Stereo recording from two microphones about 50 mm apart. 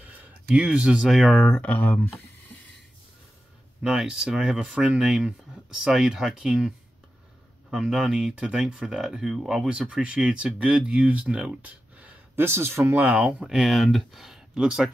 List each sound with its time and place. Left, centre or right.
0.0 s a sound: right
0.6 s speech: right
1.5 s speech: left
4.0 s speech: centre
7.7 s speech: centre
12.4 s speech: right
12.9 s speech: right
13.4 s speech: centre
13.7 s speech: centre
14.5 s speech: centre